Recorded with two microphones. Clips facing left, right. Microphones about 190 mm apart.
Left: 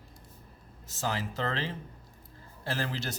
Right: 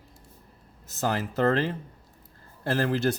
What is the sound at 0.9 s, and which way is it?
Speech, 50° right (ahead or behind).